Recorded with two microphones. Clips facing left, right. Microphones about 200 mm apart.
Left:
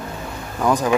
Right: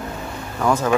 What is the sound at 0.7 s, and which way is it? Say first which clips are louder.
Speech: even; 15° left (ahead or behind).